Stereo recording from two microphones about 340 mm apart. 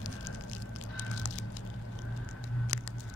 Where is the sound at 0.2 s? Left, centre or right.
Left.